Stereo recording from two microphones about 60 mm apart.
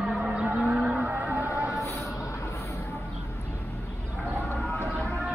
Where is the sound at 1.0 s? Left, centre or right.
Right.